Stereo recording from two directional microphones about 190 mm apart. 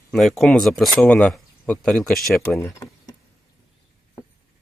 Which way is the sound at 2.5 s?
15° left (ahead or behind).